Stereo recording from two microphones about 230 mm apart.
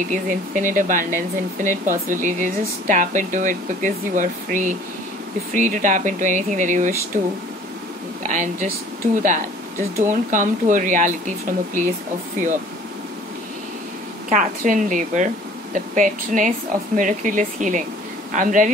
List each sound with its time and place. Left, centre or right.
0.1 s speech: right
14.3 s speech: right